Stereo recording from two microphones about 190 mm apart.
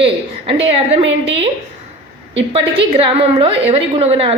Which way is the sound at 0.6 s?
30° right (ahead or behind).